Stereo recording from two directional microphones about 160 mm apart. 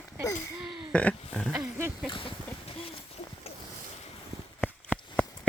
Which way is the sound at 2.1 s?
35° left (ahead or behind).